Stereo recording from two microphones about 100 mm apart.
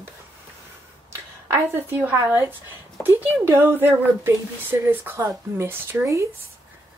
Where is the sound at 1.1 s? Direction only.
25° right (ahead or behind).